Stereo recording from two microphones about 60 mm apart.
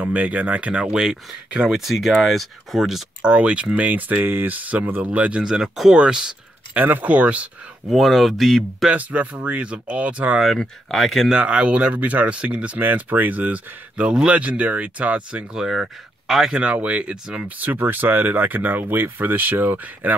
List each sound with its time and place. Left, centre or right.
0.0 s speech: right
1.8 s speech: centre
3.2 s speech: centre
5.4 s speech: centre
6.7 s speech: right
7.9 s speech: centre
8.9 s speech: right
10.4 s speech: centre
11.2 s speech: centre
15.5 s speech: centre
16.5 s speech: centre
17.6 s speech: right